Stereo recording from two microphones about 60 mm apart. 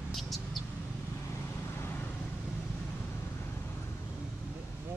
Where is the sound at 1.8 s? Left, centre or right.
Left.